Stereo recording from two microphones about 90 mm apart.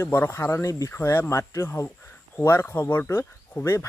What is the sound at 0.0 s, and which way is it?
Speech, 30° left (ahead or behind).